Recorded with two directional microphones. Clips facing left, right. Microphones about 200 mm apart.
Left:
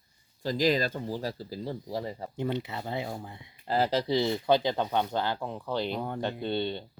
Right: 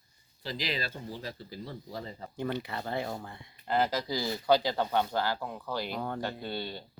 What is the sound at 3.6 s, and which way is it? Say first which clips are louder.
Speech: left 3 dB; 30° left (ahead or behind).